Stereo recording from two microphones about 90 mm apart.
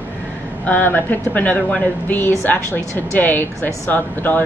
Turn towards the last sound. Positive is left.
turn(degrees=20)  # may be behind; listen again after turning